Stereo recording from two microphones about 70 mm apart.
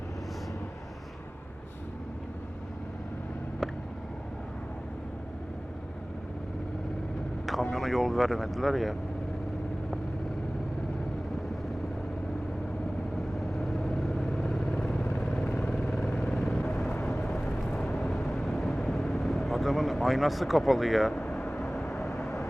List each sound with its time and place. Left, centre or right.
7.4 s speech: centre
13.5 s vehicle: centre
15.5 s vehicle: centre
15.8 s vehicle: centre
22.1 s vehicle: left